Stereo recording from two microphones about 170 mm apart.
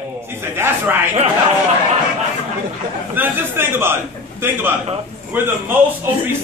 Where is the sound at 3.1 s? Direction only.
10° right (ahead or behind).